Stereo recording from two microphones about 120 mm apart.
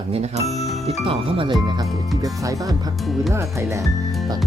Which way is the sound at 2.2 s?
30° right (ahead or behind).